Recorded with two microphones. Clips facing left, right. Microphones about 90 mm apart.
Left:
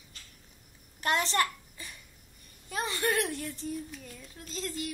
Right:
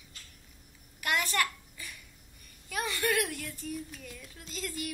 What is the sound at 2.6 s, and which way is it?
Child singing, 25° left (ahead or behind).